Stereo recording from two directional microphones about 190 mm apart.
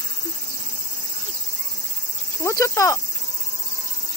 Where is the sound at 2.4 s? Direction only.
15° left (ahead or behind).